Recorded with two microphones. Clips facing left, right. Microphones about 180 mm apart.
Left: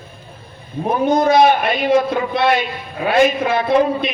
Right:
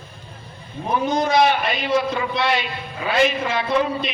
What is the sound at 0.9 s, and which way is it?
A man's voice, 55° left (ahead or behind).